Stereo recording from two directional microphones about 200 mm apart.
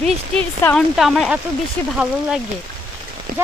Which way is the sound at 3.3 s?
45° right (ahead or behind).